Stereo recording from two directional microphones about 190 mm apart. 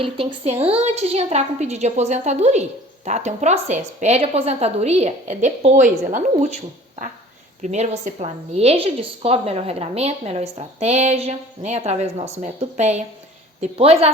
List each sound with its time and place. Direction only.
0.0 s a woman's voice: 30° right (ahead or behind)
7.6 s a woman's voice: 40° right (ahead or behind)